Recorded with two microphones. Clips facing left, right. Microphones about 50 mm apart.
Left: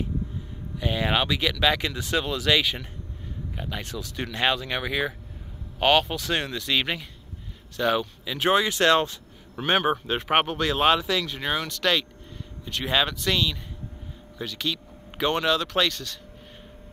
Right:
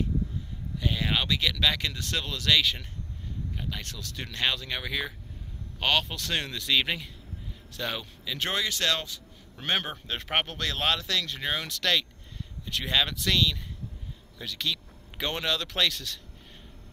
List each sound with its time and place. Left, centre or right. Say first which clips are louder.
0.7 s speech: left 4 dB; left
9.6 s speech: left 7 dB; centre